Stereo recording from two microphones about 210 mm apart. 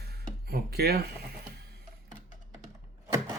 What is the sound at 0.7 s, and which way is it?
Speech, 50° right (ahead or behind).